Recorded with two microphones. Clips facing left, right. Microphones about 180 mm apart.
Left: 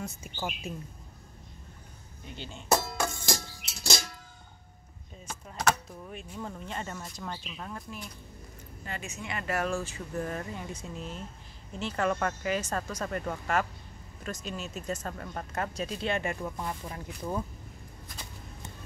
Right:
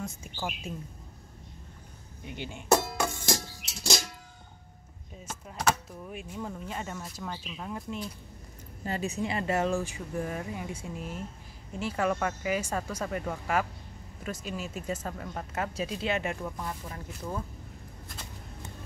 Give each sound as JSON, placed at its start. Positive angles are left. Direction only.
{"t": 0.0, "sound": "speech", "side_deg": 0}
{"t": 2.2, "sound": "speech", "side_deg": -15}
{"t": 2.8, "sound": "music", "side_deg": 0}
{"t": 5.2, "sound": "speech", "side_deg": -5}
{"t": 8.8, "sound": "speech", "side_deg": -35}
{"t": 16.6, "sound": "speech", "side_deg": 15}